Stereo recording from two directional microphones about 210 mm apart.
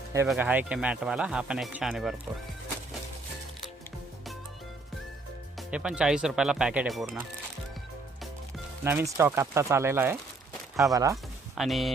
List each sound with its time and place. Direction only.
0.3 s speech: 10° right (ahead or behind)
5.5 s speech: 5° right (ahead or behind)
8.8 s speech: 10° right (ahead or behind)
11.5 s speech: centre (ahead or behind)